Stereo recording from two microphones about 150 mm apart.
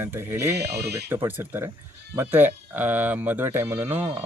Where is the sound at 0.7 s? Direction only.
90° right.